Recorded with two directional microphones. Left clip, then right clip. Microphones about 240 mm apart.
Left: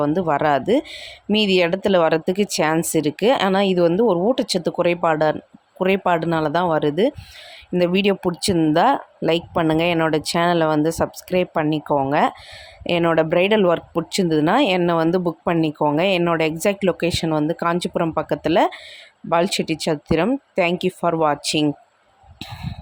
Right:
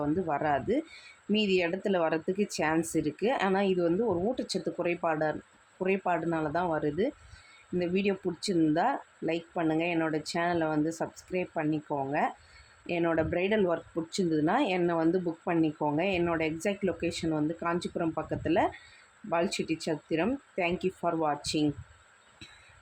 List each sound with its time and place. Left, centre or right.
0.0 s speech: left